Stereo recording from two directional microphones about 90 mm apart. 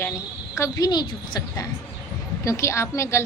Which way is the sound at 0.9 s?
50° left (ahead or behind).